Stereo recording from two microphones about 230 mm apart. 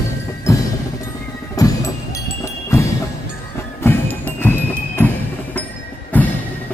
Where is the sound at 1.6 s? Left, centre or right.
Centre.